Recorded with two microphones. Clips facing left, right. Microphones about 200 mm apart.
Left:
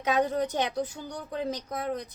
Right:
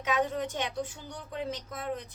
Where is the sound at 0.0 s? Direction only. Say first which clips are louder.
Left 4 dB; 35° left (ahead or behind).